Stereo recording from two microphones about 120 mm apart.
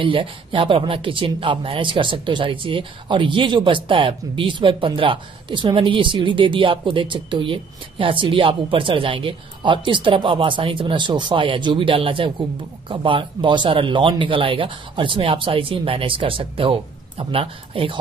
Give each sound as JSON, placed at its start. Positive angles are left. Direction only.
{"t": 0.0, "sound": "speech", "side_deg": -45}